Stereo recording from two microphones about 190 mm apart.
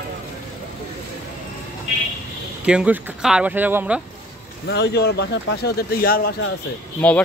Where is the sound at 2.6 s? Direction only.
5° right (ahead or behind).